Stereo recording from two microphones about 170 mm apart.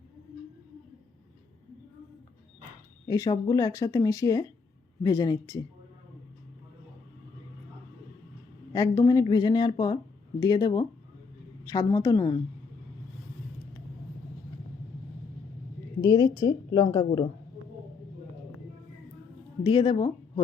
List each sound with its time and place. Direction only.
3.1 s speech: 20° left (ahead or behind)
8.7 s speech: 20° left (ahead or behind)
16.0 s speech: 20° left (ahead or behind)
19.6 s speech: 30° left (ahead or behind)